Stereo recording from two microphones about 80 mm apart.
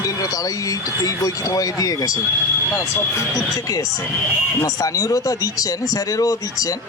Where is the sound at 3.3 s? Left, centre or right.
Left.